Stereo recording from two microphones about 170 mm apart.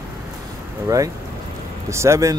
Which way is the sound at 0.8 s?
20° right (ahead or behind).